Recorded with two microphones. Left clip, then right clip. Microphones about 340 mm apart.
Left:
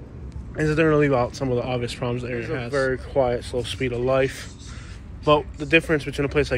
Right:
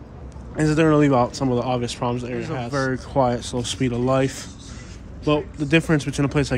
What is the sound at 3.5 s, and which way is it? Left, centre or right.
Speech, right.